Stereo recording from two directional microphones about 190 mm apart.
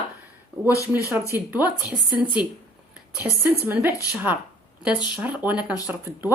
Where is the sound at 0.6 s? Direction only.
15° left (ahead or behind).